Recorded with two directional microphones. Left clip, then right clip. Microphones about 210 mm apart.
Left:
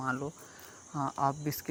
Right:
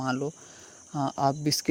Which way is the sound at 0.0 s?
45° right (ahead or behind).